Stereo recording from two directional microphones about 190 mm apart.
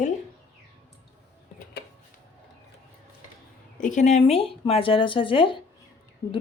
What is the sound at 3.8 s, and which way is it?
Speech, 40° left (ahead or behind).